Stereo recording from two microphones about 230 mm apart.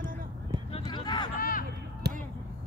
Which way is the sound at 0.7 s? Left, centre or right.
Left.